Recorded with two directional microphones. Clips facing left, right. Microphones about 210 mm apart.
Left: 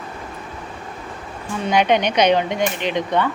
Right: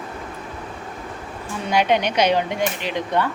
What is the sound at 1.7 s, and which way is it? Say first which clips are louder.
Speech: left 2 dB; 5° right (ahead or behind).